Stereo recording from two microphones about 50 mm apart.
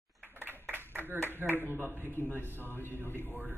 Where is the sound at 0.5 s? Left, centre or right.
Right.